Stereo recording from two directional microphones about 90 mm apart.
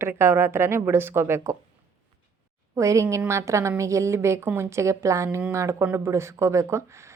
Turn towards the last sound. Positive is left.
turn(degrees=-35)  # may be behind; listen again after turning